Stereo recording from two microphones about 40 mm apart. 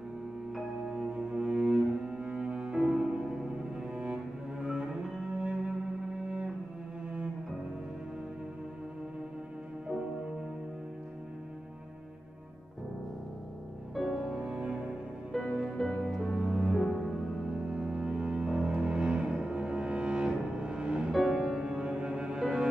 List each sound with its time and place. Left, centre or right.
0.8 s cello: centre
2.8 s music: centre
3.9 s cello: right
5.4 s music: right
14.4 s cello: right
15.3 s music: centre
16.2 s music: centre
16.4 s music: centre
16.7 s music: centre
17.5 s music: right
21.1 s music: centre
21.6 s music: right